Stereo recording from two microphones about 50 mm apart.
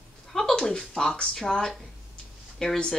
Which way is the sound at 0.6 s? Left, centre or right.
Centre.